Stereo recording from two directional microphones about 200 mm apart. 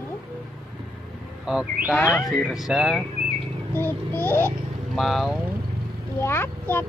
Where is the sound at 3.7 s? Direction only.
10° left (ahead or behind).